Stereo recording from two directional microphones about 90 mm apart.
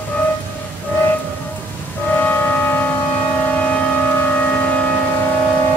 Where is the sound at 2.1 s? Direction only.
20° left (ahead or behind).